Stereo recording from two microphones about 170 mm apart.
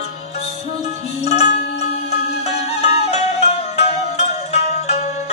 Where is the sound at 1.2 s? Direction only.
40° left (ahead or behind).